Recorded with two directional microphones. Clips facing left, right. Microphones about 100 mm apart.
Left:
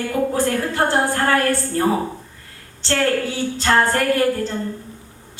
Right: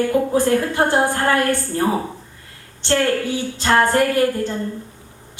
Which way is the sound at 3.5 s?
15° right (ahead or behind).